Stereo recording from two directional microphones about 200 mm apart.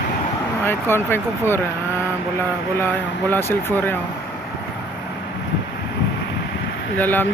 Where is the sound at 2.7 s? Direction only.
10° left (ahead or behind).